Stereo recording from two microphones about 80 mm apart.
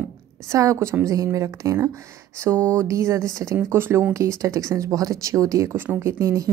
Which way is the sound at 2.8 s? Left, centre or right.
Right.